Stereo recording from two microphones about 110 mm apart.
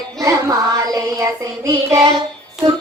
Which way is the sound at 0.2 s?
30° right (ahead or behind).